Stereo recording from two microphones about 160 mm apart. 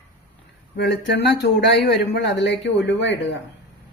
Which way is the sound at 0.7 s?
90° left.